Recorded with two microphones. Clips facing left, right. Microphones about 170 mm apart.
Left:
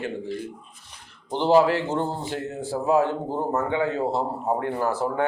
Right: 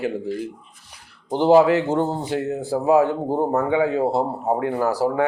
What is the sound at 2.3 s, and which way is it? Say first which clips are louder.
Speech: right 6 dB; 15° right (ahead or behind).